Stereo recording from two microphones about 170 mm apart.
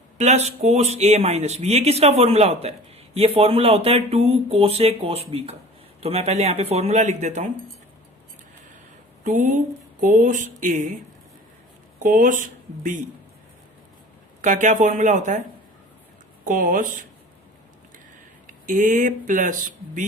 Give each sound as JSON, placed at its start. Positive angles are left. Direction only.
{"t": 0.2, "sound": "speech", "side_deg": -40}
{"t": 9.2, "sound": "speech", "side_deg": -50}
{"t": 11.9, "sound": "speech", "side_deg": -55}
{"t": 14.4, "sound": "speech", "side_deg": -45}
{"t": 16.4, "sound": "speech", "side_deg": -55}
{"t": 18.4, "sound": "speech", "side_deg": -50}